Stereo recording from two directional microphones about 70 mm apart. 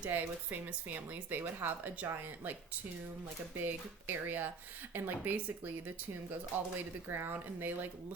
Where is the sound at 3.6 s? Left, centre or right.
Right.